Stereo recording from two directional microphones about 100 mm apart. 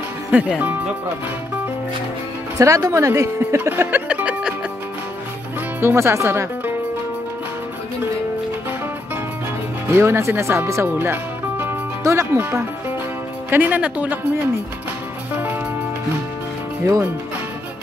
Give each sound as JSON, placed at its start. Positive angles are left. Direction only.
{"t": 0.3, "sound": "speech", "side_deg": -15}
{"t": 2.6, "sound": "speech", "side_deg": -30}
{"t": 5.8, "sound": "speech", "side_deg": -25}
{"t": 9.9, "sound": "speech", "side_deg": -25}
{"t": 16.8, "sound": "speech", "side_deg": -30}